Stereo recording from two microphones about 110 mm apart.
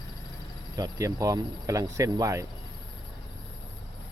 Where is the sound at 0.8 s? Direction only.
30° right (ahead or behind).